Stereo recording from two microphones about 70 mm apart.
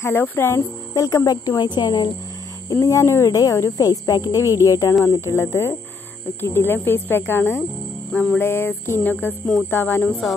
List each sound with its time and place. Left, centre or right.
0.0 s speech: left
1.0 s a woman's voice: left
2.7 s speech: left
5.2 s speech: left